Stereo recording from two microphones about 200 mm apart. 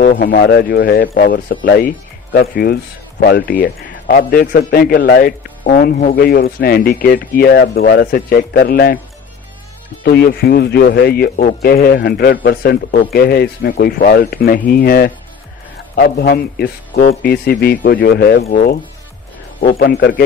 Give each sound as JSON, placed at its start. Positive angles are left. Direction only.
{"t": 0.0, "sound": "speech", "side_deg": 45}
{"t": 10.0, "sound": "speech", "side_deg": 50}
{"t": 19.8, "sound": "speech", "side_deg": 55}